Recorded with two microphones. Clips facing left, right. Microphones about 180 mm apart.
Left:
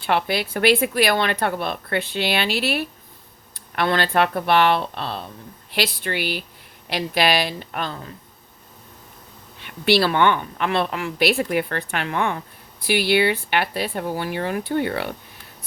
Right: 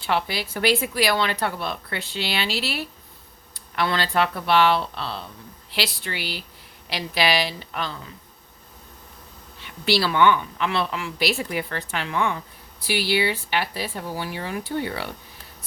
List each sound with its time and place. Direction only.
0.0 s a woman's voice: 55° left (ahead or behind)
9.6 s a woman's voice: 60° left (ahead or behind)